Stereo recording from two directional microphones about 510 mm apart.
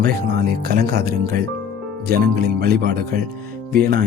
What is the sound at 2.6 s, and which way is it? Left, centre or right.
Speech, centre.